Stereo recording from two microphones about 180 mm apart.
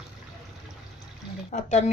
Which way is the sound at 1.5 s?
40° left (ahead or behind).